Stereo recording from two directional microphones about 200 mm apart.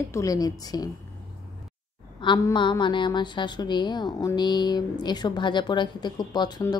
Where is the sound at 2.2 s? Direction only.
20° left (ahead or behind).